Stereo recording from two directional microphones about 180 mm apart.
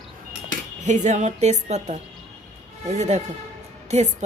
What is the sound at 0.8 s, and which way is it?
Speech, 40° right (ahead or behind).